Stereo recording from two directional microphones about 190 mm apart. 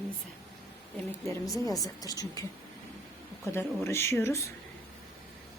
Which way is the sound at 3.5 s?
15° left (ahead or behind).